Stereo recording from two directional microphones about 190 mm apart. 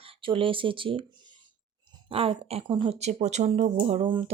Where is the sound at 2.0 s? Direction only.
30° right (ahead or behind).